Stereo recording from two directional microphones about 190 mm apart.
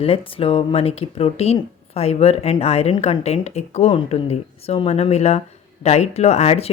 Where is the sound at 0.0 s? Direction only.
30° left (ahead or behind).